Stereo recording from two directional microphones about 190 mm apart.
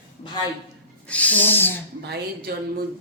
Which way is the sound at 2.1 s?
55° right (ahead or behind).